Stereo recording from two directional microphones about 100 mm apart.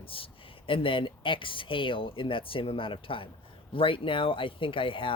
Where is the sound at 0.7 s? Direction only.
60° left (ahead or behind).